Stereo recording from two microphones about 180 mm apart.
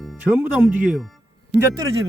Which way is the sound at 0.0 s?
Centre (ahead or behind).